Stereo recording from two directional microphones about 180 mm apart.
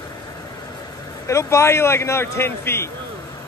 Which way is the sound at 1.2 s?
15° left (ahead or behind).